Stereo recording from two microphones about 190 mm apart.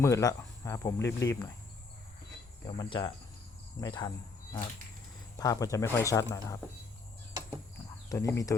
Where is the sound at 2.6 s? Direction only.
25° left (ahead or behind).